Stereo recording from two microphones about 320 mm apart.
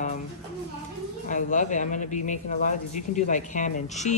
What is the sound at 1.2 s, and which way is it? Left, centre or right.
Speech, left.